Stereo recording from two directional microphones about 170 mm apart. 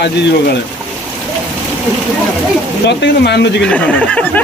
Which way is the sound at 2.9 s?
85° left.